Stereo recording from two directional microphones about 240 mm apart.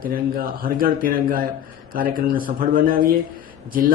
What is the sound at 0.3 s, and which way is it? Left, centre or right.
Speech, right.